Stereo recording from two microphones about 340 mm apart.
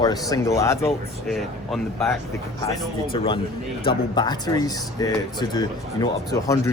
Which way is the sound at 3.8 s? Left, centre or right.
Centre.